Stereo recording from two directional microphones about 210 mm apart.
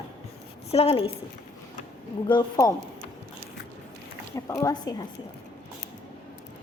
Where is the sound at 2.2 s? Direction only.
20° left (ahead or behind).